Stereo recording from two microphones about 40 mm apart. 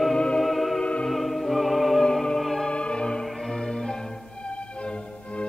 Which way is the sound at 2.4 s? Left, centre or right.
Centre.